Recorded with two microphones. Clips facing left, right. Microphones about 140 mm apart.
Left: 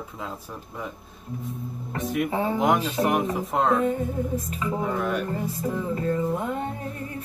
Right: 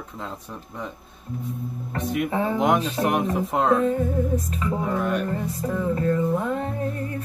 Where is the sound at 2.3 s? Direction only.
30° left (ahead or behind).